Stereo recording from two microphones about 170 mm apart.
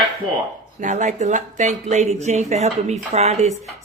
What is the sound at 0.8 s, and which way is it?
Speech, 50° right (ahead or behind).